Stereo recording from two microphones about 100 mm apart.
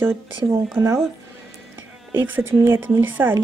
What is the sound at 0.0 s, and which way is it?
Speech, 25° right (ahead or behind).